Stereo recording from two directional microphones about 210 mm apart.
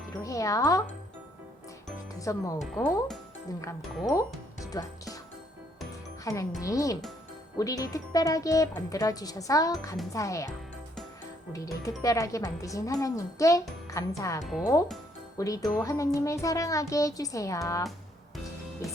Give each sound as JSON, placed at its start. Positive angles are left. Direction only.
{"t": 0.2, "sound": "speech", "side_deg": 15}
{"t": 2.1, "sound": "speech", "side_deg": 15}
{"t": 2.6, "sound": "speech", "side_deg": 5}
{"t": 4.7, "sound": "speech", "side_deg": 15}
{"t": 6.3, "sound": "speech", "side_deg": 15}
{"t": 11.5, "sound": "speech", "side_deg": 15}
{"t": 14.4, "sound": "speech", "side_deg": 0}
{"t": 15.4, "sound": "speech", "side_deg": 15}